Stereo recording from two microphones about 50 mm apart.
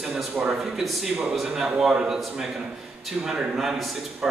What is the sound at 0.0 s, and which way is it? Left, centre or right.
A man's voice, centre.